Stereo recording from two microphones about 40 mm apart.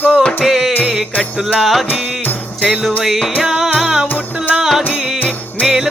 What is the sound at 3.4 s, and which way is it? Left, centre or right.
Music, centre.